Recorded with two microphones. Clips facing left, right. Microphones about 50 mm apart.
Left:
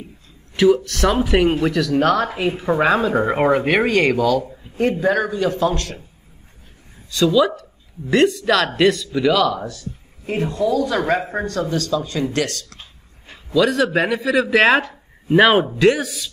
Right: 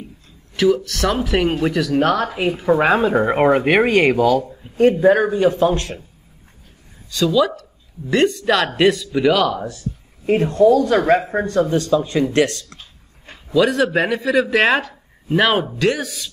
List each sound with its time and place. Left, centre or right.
0.6 s speech: centre
2.8 s speech: centre
4.5 s a sound: centre
5.0 s speech: right
7.1 s speech: centre; by 12.7 s right
13.6 s speech: centre
14.8 s speech: centre